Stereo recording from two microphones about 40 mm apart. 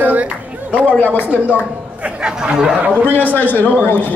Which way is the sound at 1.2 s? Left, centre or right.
Right.